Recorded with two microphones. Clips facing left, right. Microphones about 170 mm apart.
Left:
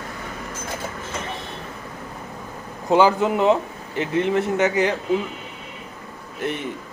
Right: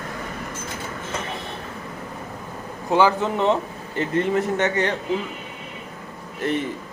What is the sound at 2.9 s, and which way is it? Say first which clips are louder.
A man's voice: left 2 dB; 15° left (ahead or behind).